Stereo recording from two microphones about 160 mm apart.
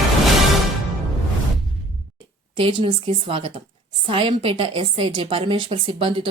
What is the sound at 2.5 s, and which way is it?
A woman's voice, 35° right (ahead or behind).